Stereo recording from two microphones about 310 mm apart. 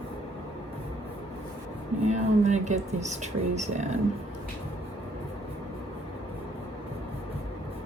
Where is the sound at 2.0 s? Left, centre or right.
Right.